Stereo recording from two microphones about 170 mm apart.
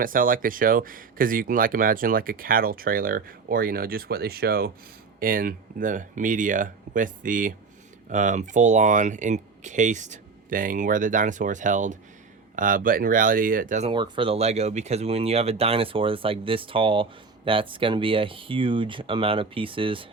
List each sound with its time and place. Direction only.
0.0 s speech: 55° right (ahead or behind)
13.8 s speech: 30° right (ahead or behind)